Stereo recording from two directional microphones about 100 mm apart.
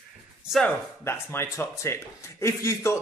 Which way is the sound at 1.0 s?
25° left (ahead or behind).